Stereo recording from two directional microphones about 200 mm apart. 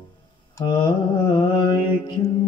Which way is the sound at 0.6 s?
25° left (ahead or behind).